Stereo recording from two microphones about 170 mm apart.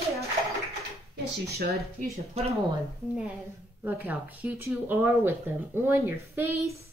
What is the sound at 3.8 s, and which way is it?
Speech, 10° right (ahead or behind).